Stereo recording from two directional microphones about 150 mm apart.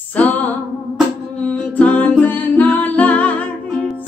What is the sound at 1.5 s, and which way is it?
Music, 10° left (ahead or behind).